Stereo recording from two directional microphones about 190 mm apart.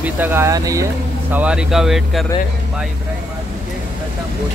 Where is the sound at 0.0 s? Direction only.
10° right (ahead or behind).